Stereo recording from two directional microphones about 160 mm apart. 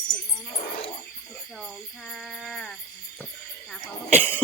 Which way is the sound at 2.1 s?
Centre (ahead or behind).